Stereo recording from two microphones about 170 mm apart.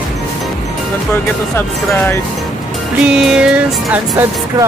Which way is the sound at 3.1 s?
5° right (ahead or behind).